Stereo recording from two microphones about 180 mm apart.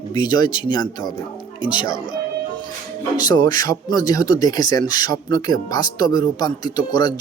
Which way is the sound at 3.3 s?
20° left (ahead or behind).